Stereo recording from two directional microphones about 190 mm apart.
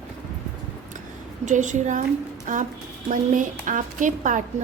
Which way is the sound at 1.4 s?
40° right (ahead or behind).